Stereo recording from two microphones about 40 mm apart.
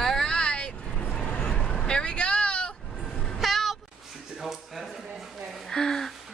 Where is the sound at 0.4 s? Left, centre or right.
Left.